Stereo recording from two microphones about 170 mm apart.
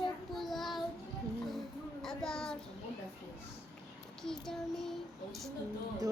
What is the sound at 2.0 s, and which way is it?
Speech, 5° left (ahead or behind).